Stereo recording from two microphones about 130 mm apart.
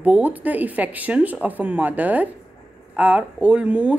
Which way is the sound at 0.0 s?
10° right (ahead or behind).